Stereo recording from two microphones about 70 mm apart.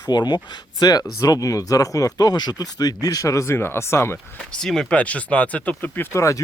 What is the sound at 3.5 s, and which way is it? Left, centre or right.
Speech, left.